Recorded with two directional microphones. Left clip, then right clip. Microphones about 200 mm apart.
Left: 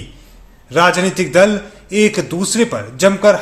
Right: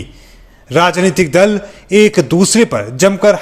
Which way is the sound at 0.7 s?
35° right (ahead or behind).